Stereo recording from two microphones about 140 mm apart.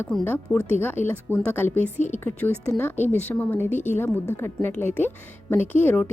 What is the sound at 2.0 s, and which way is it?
Speech, 55° left (ahead or behind).